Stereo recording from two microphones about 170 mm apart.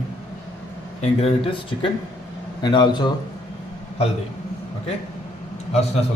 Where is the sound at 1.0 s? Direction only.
35° left (ahead or behind).